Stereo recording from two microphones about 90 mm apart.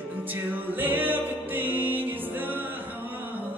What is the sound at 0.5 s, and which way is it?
Music, 20° right (ahead or behind).